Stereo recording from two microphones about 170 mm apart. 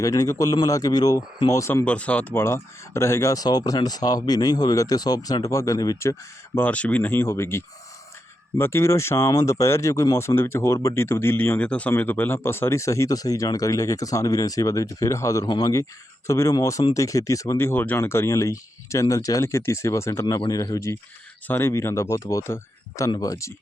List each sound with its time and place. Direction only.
0.0 s speech: 20° left (ahead or behind)
6.6 s speech: 10° left (ahead or behind)